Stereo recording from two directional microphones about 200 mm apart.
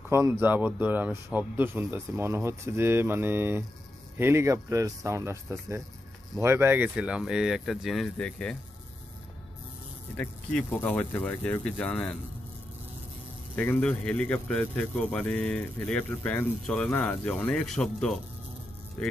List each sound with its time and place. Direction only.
0.1 s speech: 10° right (ahead or behind); by 8.5 s 5° left (ahead or behind)
10.1 s speech: 5° left (ahead or behind)
13.6 s speech: 5° left (ahead or behind)